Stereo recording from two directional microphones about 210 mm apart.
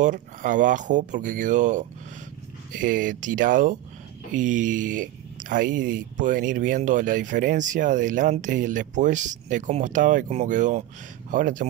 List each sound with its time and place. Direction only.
0.0 s speech: 40° right (ahead or behind)